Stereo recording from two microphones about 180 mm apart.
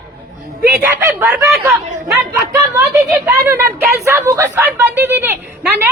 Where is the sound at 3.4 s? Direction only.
15° right (ahead or behind).